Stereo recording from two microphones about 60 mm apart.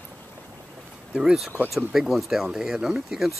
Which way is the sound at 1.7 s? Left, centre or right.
Centre.